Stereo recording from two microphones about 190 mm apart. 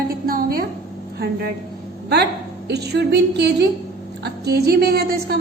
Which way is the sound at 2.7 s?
60° right (ahead or behind).